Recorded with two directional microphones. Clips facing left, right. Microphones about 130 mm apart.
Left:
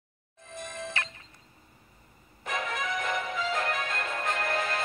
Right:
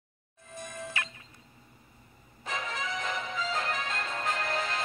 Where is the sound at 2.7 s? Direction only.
50° left (ahead or behind).